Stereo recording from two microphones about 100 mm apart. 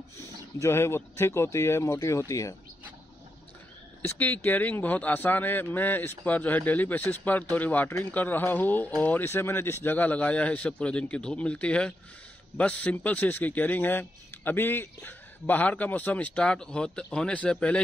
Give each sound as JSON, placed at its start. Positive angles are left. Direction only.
{"t": 0.6, "sound": "speech", "side_deg": 25}
{"t": 4.0, "sound": "speech", "side_deg": 20}